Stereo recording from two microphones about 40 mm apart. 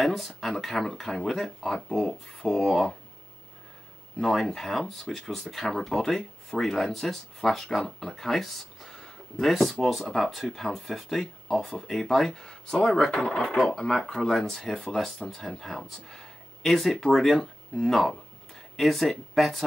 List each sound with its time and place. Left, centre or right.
0.0 s speech: centre
4.2 s speech: centre
12.4 s speech: centre
13.1 s speech: centre